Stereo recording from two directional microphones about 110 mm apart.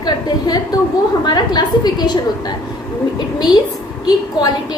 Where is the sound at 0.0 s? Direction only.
40° left (ahead or behind).